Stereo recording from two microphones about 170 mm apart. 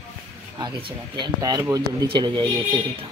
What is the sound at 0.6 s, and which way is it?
Speech, 25° right (ahead or behind).